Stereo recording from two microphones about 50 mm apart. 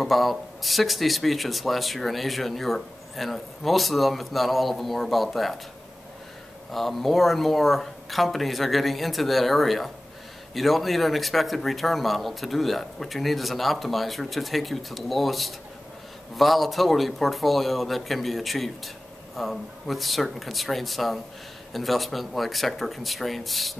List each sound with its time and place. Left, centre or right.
0.0 s speech: centre
6.7 s speech: centre